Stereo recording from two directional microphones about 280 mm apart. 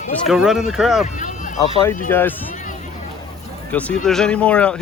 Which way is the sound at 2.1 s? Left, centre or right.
Centre.